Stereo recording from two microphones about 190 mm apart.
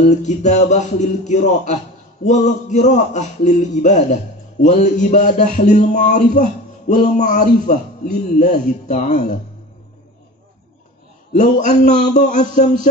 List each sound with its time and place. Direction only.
0.0 s a man's voice: 40° left (ahead or behind)
11.3 s a man's voice: 40° left (ahead or behind)